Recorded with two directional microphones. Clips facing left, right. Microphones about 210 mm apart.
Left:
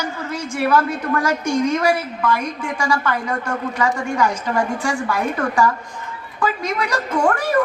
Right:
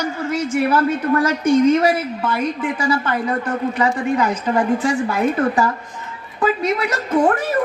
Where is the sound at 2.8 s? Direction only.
30° right (ahead or behind).